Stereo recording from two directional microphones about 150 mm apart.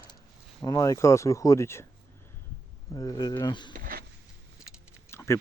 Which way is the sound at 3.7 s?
70° right (ahead or behind).